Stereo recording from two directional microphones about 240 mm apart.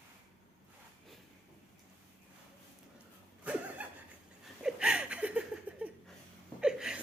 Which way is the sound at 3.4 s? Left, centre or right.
Centre.